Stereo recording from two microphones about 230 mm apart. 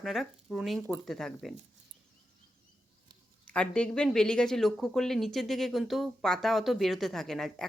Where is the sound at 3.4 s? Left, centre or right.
Centre.